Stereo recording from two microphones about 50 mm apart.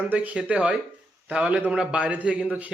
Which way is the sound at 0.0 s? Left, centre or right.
Right.